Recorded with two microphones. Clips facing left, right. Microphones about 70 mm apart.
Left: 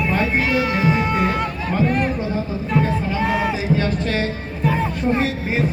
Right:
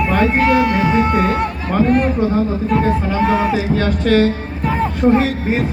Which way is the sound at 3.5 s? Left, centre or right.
Right.